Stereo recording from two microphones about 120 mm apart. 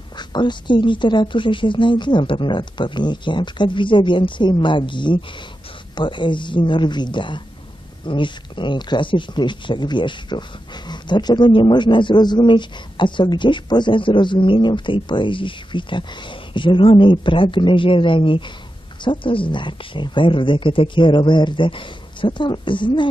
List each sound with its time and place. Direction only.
0.2 s a woman's voice: 40° left (ahead or behind)